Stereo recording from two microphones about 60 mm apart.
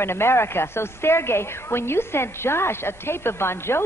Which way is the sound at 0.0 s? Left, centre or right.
Left.